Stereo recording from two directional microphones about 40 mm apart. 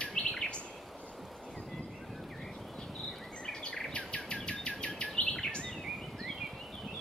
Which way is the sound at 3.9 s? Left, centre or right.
Left.